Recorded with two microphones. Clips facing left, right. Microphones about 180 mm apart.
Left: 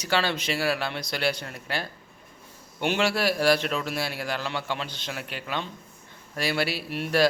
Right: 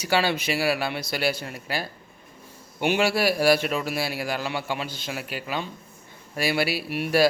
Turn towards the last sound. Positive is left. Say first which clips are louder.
# right 3 dB
turn(degrees=-10)  # may be behind; listen again after turning